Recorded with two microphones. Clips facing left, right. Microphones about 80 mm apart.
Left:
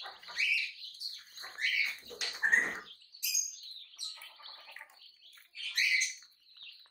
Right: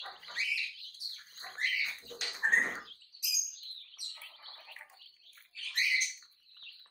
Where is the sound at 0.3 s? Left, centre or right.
Right.